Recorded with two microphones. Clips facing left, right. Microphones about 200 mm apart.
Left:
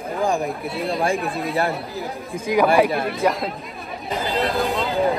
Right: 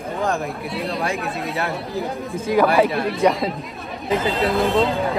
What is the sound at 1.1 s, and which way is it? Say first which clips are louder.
Speech: left 2 dB; centre (ahead or behind).